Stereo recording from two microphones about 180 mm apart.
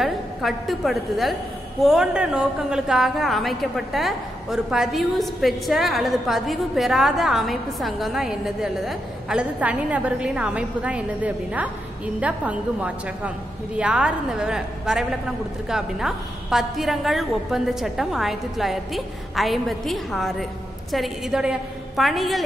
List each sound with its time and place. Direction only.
0.0 s a woman's voice: centre (ahead or behind)